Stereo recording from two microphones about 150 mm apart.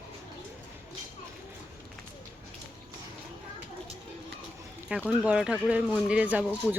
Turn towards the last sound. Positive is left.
turn(degrees=-10)  # may be behind; listen again after turning